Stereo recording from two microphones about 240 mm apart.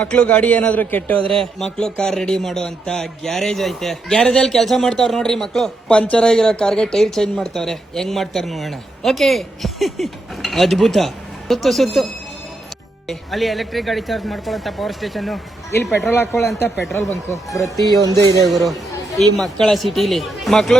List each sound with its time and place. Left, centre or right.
0.0 s a man's voice: centre
13.1 s a man's voice: centre
18.0 s speech: centre
18.4 s speech: centre